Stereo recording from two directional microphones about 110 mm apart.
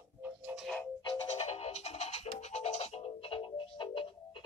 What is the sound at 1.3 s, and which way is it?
Music, 70° left (ahead or behind).